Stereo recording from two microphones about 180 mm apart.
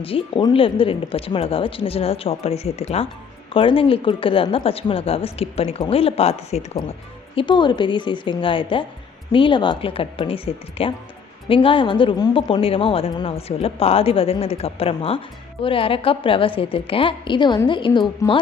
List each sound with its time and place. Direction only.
0.0 s a woman's voice: 30° left (ahead or behind)